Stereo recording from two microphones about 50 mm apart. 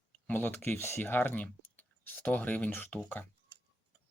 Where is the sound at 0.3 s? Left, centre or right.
Left.